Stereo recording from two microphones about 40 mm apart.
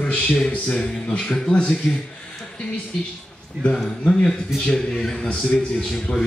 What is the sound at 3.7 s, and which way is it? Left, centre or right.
A man's voice, centre.